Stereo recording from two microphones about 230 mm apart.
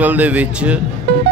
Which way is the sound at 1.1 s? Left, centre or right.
Right.